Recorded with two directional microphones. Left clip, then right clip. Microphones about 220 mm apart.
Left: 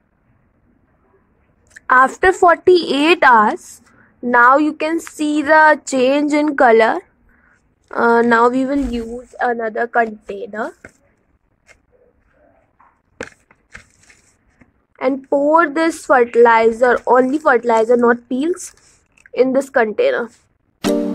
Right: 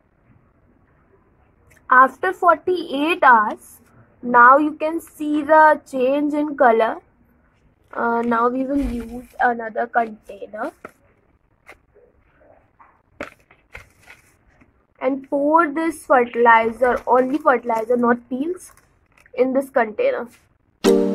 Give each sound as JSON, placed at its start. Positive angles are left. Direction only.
{"t": 1.9, "sound": "a woman's voice", "side_deg": 50}
{"t": 15.0, "sound": "a woman's voice", "side_deg": 40}
{"t": 20.8, "sound": "music", "side_deg": 0}